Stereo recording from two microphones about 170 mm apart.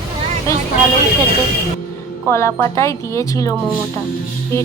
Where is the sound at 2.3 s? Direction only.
15° left (ahead or behind).